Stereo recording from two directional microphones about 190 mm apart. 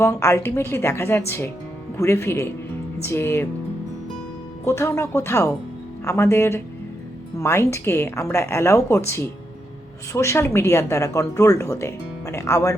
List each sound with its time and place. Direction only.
0.0 s a woman's voice: 15° left (ahead or behind)
4.6 s a woman's voice: 15° left (ahead or behind)